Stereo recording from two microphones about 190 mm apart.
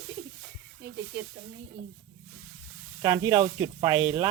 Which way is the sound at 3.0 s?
15° right (ahead or behind).